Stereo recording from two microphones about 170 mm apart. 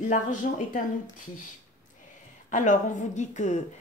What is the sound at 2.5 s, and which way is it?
Speech, 45° left (ahead or behind).